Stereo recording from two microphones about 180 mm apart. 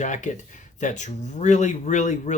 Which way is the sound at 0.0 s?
45° left (ahead or behind).